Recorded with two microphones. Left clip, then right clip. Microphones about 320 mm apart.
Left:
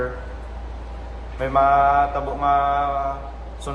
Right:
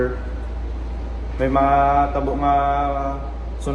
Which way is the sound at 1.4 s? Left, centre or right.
Centre.